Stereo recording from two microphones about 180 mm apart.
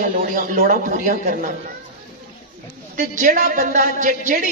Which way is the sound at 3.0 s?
45° right (ahead or behind).